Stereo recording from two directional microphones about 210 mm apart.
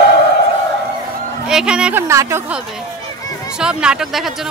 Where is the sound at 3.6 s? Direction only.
5° right (ahead or behind).